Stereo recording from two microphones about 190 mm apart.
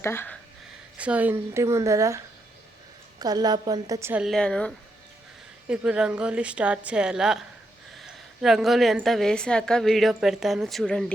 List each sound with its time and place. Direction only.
0.0 s speech: 10° left (ahead or behind)
0.9 s a woman's voice: 5° right (ahead or behind)